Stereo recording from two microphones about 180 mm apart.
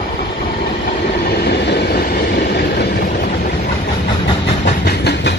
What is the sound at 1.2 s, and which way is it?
Train, 65° left (ahead or behind).